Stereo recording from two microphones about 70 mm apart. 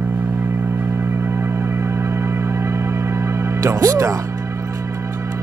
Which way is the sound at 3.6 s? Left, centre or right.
Right.